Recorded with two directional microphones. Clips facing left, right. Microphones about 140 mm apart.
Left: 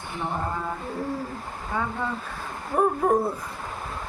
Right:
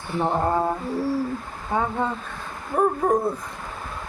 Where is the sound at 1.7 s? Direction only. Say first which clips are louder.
Right 5 dB; 20° right (ahead or behind).